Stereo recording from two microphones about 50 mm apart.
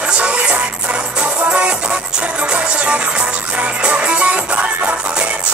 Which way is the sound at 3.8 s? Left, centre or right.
Right.